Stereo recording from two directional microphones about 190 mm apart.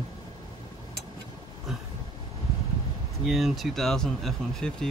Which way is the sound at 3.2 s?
Centre (ahead or behind).